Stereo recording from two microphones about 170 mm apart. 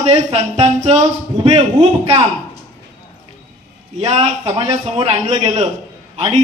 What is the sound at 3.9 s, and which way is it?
Speech, 40° right (ahead or behind).